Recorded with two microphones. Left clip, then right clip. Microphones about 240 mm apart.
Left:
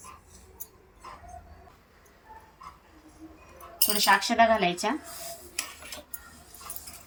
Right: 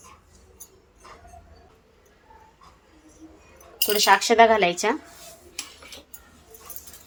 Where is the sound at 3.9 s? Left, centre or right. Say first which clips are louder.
Right 5 dB; right.